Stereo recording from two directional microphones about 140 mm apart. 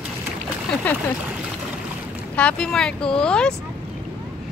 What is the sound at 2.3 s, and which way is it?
Speech, 10° left (ahead or behind).